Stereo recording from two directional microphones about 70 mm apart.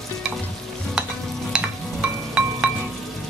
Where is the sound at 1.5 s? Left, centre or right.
Centre.